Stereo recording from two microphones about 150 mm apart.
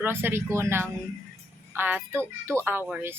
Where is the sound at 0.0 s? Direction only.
15° right (ahead or behind).